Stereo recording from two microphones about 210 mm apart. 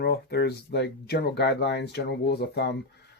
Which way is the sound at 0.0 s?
50° left (ahead or behind).